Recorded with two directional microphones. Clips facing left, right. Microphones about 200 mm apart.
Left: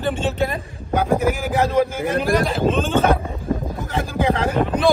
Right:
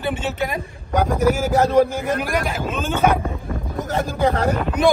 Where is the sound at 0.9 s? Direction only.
40° right (ahead or behind).